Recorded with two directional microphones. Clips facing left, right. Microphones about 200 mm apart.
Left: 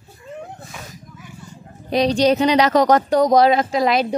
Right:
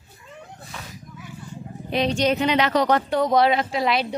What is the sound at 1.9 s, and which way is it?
A woman's voice, 35° left (ahead or behind).